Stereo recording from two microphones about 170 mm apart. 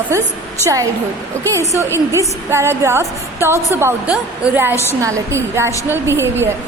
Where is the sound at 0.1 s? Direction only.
20° right (ahead or behind).